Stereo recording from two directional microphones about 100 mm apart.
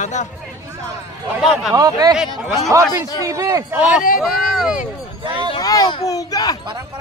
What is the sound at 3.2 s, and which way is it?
Speech, 35° right (ahead or behind).